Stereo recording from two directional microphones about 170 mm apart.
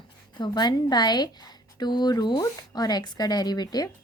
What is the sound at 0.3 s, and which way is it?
A woman's voice, 25° left (ahead or behind).